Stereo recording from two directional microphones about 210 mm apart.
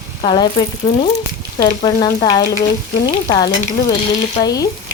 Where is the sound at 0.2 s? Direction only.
25° left (ahead or behind).